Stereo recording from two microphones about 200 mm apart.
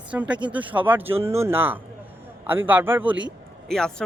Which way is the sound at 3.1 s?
65° right (ahead or behind).